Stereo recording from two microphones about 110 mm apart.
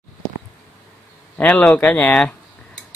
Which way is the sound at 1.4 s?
10° left (ahead or behind).